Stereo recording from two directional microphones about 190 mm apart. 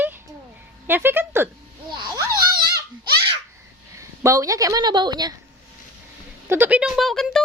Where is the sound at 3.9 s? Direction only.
15° right (ahead or behind).